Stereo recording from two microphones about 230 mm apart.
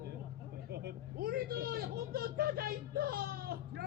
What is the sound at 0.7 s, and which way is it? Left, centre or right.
Vehicle, right.